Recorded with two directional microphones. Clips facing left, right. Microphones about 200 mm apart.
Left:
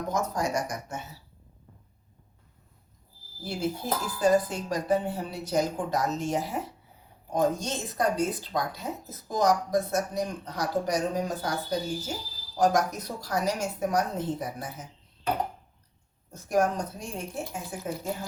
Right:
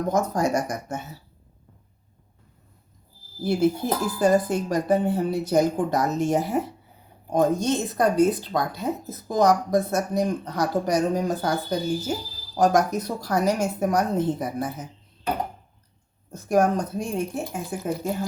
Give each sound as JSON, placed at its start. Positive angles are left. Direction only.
{"t": 0.1, "sound": "speech", "side_deg": -50}
{"t": 3.4, "sound": "speech", "side_deg": -55}
{"t": 12.5, "sound": "speech", "side_deg": -60}
{"t": 16.5, "sound": "speech", "side_deg": -55}